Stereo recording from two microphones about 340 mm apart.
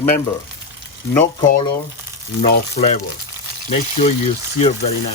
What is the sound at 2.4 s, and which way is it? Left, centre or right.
Speech, left.